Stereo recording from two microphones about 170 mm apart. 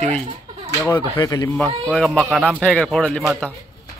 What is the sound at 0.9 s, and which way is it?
Speech, 25° left (ahead or behind).